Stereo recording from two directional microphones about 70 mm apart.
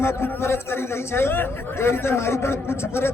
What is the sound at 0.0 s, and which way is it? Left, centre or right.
A man's voice, left.